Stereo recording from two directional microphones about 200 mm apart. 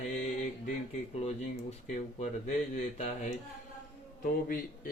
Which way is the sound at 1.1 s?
30° left (ahead or behind).